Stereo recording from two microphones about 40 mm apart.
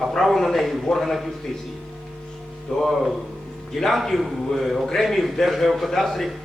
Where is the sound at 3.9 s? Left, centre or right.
Centre.